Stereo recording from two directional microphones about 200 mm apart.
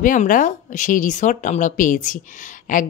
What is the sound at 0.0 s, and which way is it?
Speech, 40° left (ahead or behind).